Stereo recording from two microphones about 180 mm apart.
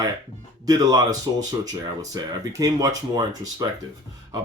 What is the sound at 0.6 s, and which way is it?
Speech, 20° right (ahead or behind).